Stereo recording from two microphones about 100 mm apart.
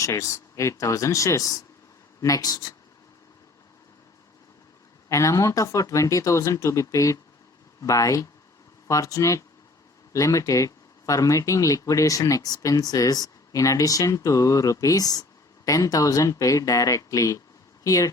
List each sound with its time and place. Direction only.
0.0 s speech: 30° left (ahead or behind)
5.0 s speech: 30° left (ahead or behind)